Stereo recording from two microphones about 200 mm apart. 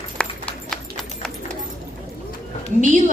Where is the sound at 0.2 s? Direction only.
5° left (ahead or behind).